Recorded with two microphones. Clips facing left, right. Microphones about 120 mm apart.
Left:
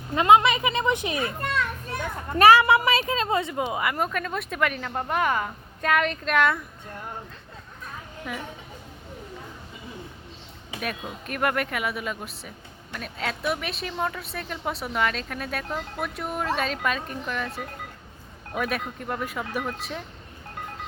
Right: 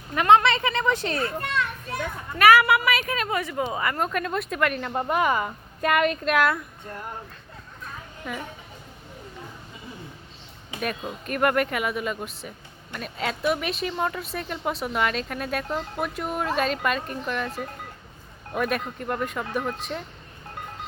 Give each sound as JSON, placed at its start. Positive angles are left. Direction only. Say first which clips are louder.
{"t": 0.1, "sound": "speech", "louder": "even", "side_deg": 20}
{"t": 2.4, "sound": "a woman's voice", "louder": "left 1 dB", "side_deg": 25}
{"t": 8.3, "sound": "speech", "louder": "right 1 dB", "side_deg": 5}
{"t": 11.3, "sound": "speech", "louder": "right 3 dB", "side_deg": 0}